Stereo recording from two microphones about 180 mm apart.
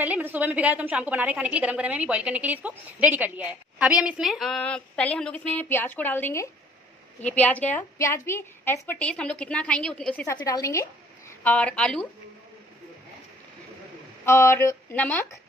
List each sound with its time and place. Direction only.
0.0 s a woman's voice: 10° right (ahead or behind)
10.2 s a woman's voice: 20° left (ahead or behind)
14.2 s a woman's voice: 15° left (ahead or behind)